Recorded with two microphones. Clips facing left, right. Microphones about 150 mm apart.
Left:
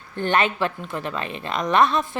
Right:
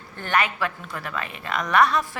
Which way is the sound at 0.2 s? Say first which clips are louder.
Left 3 dB; 25° left (ahead or behind).